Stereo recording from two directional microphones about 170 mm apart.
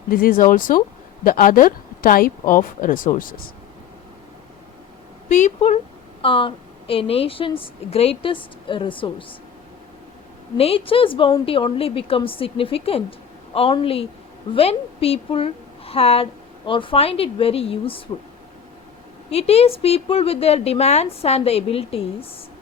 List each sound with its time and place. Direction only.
0.1 s a woman's voice: 55° left (ahead or behind)
5.3 s a woman's voice: 45° left (ahead or behind)
10.6 s a woman's voice: 35° left (ahead or behind)
19.3 s a woman's voice: 35° left (ahead or behind)